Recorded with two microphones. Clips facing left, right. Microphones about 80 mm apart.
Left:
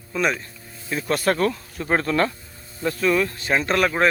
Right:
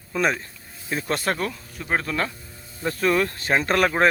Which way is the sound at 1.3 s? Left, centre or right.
Centre.